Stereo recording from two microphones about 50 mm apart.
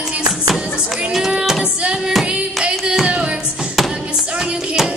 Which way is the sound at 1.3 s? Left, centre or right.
Centre.